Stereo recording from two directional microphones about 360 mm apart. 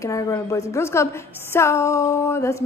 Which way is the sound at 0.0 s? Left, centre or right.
Centre.